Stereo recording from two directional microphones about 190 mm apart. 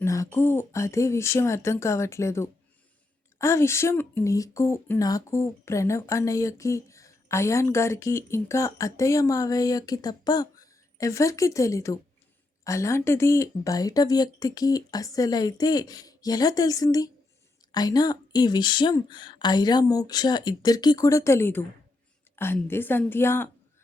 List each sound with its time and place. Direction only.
0.0 s speech: 15° left (ahead or behind)
22.6 s speech: 10° left (ahead or behind)